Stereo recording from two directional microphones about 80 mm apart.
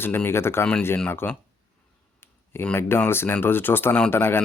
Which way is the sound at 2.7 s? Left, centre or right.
Left.